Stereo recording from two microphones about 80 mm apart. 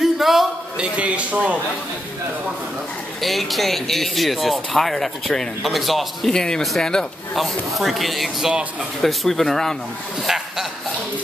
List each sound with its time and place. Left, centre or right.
0.0 s a sound: centre
0.9 s a man's voice: centre
3.2 s speech: centre